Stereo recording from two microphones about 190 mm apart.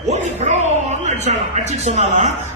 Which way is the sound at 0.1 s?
35° right (ahead or behind).